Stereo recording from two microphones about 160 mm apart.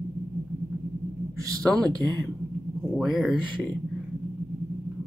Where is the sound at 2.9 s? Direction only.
Centre (ahead or behind).